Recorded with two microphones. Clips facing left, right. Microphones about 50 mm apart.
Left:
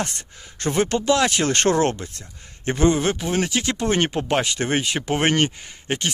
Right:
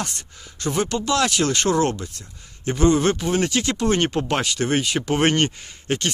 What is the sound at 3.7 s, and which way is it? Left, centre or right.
Speech, left.